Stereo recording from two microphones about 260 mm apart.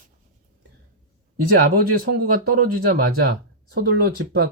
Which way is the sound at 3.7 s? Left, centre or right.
Right.